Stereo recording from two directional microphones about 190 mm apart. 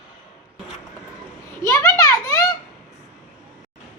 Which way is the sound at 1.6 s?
15° left (ahead or behind).